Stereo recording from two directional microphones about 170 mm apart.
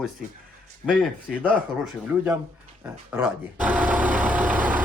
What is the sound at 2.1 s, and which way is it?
Speech, 10° right (ahead or behind).